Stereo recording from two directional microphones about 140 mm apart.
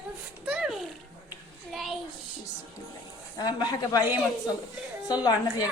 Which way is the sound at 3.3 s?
30° left (ahead or behind).